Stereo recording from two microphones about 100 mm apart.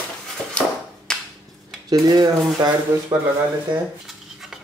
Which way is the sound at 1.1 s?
5° left (ahead or behind).